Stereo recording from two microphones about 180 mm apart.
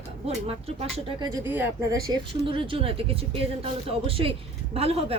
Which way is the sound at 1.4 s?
10° right (ahead or behind).